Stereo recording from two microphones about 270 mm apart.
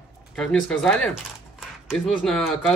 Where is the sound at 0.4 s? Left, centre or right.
Centre.